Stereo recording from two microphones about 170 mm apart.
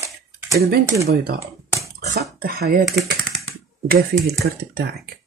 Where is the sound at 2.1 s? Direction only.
65° right (ahead or behind).